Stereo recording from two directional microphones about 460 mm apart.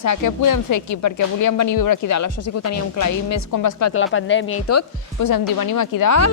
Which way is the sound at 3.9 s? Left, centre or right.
Left.